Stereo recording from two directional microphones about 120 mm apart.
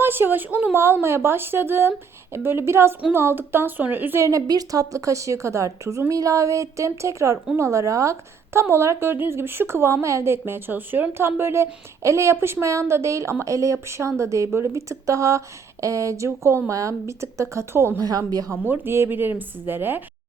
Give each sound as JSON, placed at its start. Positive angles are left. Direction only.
{"t": 0.0, "sound": "a woman's voice", "side_deg": -15}
{"t": 18.0, "sound": "speech", "side_deg": -30}
{"t": 18.5, "sound": "speech", "side_deg": -15}